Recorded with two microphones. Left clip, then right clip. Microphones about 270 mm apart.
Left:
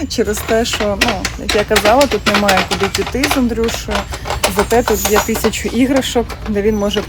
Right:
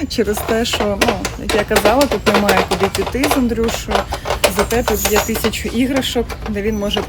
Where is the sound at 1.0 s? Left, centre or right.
Right.